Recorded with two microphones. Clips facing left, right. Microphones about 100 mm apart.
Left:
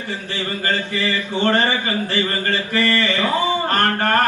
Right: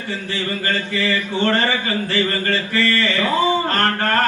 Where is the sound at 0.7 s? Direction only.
20° left (ahead or behind).